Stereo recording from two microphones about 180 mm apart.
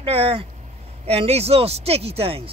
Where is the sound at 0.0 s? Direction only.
30° right (ahead or behind).